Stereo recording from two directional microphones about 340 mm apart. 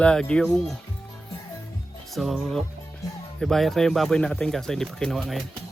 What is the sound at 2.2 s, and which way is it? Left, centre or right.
Speech, centre.